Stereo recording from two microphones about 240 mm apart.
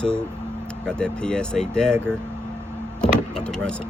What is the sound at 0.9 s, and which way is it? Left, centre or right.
Speech, centre.